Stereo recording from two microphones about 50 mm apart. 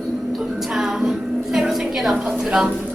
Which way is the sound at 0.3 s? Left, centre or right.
Centre.